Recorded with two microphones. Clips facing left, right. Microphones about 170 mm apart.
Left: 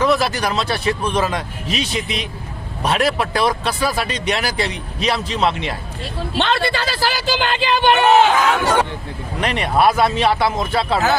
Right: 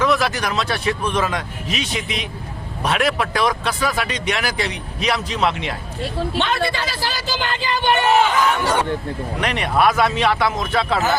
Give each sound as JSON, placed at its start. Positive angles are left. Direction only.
{"t": 0.0, "sound": "speech", "side_deg": 35}
{"t": 6.4, "sound": "speech", "side_deg": 70}
{"t": 9.4, "sound": "speech", "side_deg": 30}